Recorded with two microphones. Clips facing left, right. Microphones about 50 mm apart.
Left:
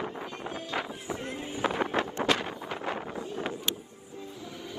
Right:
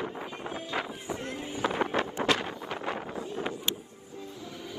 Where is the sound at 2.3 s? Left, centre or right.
Right.